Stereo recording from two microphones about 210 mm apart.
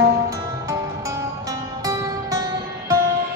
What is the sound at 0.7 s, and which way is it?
Music, 15° right (ahead or behind).